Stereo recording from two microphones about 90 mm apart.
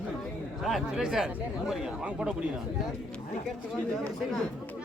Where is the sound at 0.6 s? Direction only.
Centre (ahead or behind).